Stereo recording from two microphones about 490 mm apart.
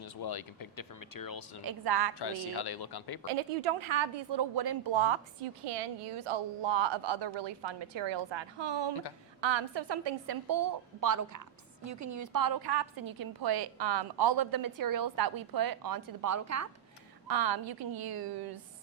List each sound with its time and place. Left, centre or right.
0.0 s speech: left
1.6 s a woman's voice: right
2.1 s speech: left
3.2 s speech: right
4.9 s a woman's voice: right
17.2 s a woman's voice: right